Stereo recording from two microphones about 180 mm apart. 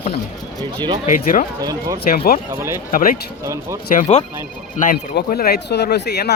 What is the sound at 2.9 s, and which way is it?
Speech, 50° left (ahead or behind).